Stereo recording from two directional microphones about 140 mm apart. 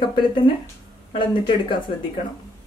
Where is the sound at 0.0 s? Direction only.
35° left (ahead or behind).